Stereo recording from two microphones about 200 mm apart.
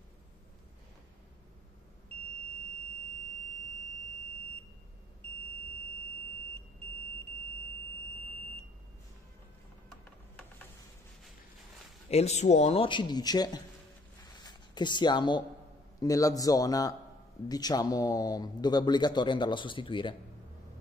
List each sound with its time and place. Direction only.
12.1 s a man's voice: 30° left (ahead or behind)
14.2 s a sound: 20° left (ahead or behind)
16.0 s a man's voice: 15° left (ahead or behind)